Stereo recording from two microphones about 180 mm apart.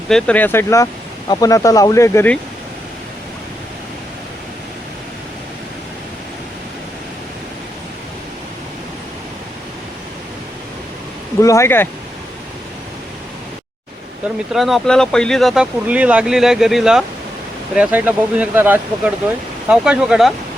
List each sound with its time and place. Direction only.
0.1 s speech: 5° left (ahead or behind)
11.3 s speech: 15° left (ahead or behind)
14.5 s speech: centre (ahead or behind)